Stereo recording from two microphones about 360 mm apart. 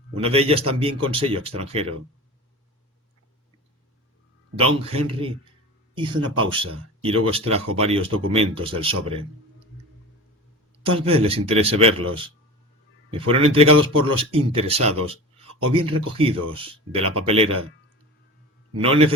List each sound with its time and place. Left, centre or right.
0.2 s speech: centre
4.9 s speech: centre
10.8 s speech: centre
18.8 s speech: centre